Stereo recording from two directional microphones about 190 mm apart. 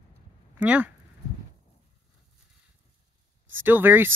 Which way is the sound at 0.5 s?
10° right (ahead or behind).